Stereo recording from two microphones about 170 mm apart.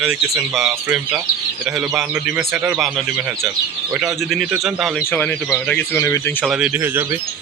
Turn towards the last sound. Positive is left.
turn(degrees=-10)  # may be behind; listen again after turning